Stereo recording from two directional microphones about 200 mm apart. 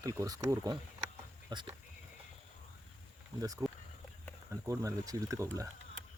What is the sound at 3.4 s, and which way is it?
Speech, 15° right (ahead or behind).